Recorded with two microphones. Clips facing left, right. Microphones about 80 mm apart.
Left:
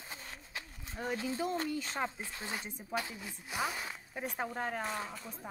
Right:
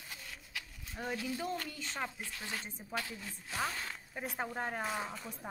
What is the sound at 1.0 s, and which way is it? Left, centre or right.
Speech, left.